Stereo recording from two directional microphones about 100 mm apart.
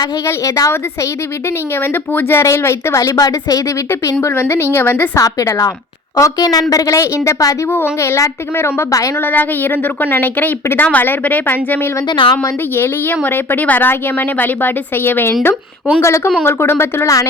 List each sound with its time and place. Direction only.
0.3 s a woman's voice: 35° left (ahead or behind)
1.8 s a woman's voice: 20° left (ahead or behind)
5.2 s a woman's voice: 35° left (ahead or behind)
9.2 s a woman's voice: 20° left (ahead or behind)
12.0 s a woman's voice: 50° left (ahead or behind)
12.4 s a woman's voice: 20° left (ahead or behind)